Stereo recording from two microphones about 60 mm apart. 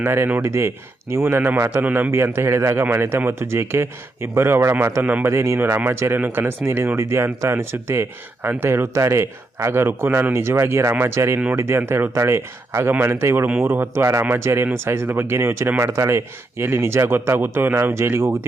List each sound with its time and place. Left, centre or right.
0.0 s speech: right
0.4 s speech: right
1.1 s speech: right
2.0 s speech: right
5.5 s speech: right
6.1 s speech: right
6.7 s speech: right
12.1 s speech: right